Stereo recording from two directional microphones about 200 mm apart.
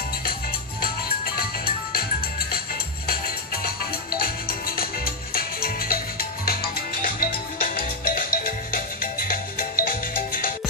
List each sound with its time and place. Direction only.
4.2 s music: 50° left (ahead or behind)